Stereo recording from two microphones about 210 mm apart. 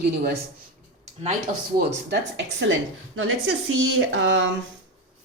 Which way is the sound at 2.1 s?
55° right (ahead or behind).